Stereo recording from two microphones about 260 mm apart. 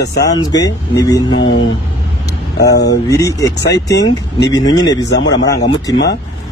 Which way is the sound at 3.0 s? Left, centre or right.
Centre.